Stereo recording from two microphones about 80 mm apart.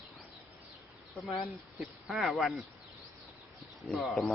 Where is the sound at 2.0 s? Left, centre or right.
Centre.